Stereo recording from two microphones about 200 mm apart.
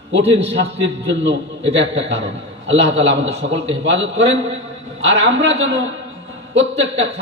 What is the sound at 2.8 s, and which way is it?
Speech, 35° right (ahead or behind).